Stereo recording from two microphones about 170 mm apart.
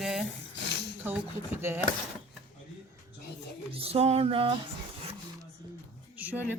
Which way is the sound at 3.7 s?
35° right (ahead or behind).